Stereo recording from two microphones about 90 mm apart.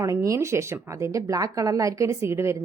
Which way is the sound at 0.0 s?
40° right (ahead or behind).